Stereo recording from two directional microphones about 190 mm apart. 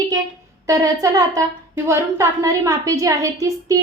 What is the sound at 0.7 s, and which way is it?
A woman's voice, 15° right (ahead or behind).